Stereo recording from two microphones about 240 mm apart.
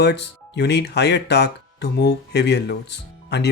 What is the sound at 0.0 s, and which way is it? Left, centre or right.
Speech, left.